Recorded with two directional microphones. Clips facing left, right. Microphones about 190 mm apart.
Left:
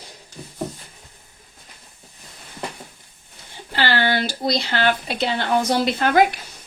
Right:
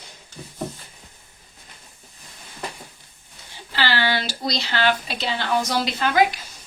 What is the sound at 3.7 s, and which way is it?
Speech, 50° left (ahead or behind).